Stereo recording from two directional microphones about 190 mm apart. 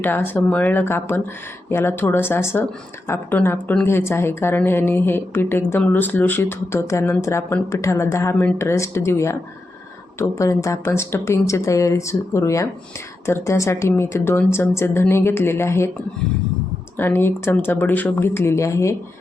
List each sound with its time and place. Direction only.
0.0 s speech: 10° left (ahead or behind)
17.0 s speech: 10° left (ahead or behind)